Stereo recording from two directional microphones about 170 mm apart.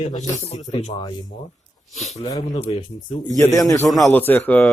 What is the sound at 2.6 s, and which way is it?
Speech, 30° left (ahead or behind).